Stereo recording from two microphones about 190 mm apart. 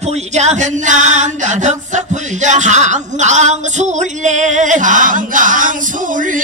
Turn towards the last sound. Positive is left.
turn(degrees=-45)  # may be behind; listen again after turning